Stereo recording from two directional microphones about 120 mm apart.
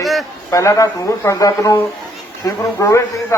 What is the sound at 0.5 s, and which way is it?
A man's voice, 25° left (ahead or behind).